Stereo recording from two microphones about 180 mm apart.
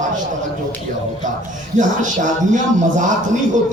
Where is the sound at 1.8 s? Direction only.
45° right (ahead or behind).